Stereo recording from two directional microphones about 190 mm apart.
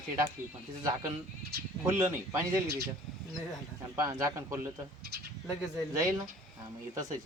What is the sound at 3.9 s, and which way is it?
Speech, 15° right (ahead or behind).